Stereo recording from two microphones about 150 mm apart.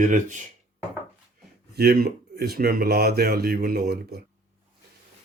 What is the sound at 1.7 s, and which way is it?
Speech, 90° right.